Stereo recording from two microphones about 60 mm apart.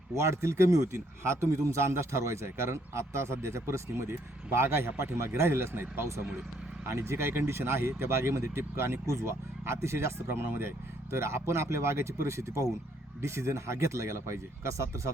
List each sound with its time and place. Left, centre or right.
0.1 s a man's voice: right
6.8 s speech: right